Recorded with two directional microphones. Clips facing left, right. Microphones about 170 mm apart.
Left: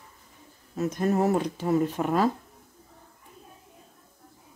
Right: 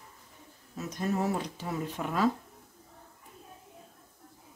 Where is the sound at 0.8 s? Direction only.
50° left (ahead or behind).